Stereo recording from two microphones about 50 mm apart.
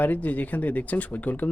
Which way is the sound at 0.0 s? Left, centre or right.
Left.